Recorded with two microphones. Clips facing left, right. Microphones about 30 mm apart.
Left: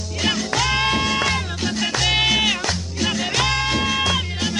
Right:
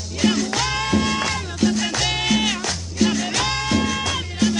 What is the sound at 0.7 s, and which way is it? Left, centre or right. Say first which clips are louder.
Music: left 1 dB; left.